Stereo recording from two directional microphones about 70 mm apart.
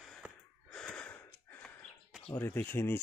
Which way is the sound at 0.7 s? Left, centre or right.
Centre.